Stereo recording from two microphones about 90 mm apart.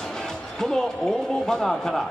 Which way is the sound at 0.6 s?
5° left (ahead or behind).